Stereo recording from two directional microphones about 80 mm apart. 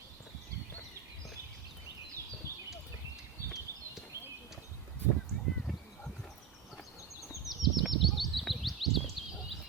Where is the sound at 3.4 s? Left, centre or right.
Right.